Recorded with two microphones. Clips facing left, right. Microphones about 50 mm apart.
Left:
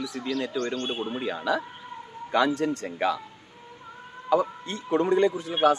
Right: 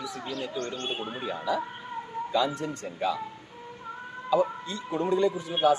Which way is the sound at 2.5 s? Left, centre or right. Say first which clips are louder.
Left 5 dB; left.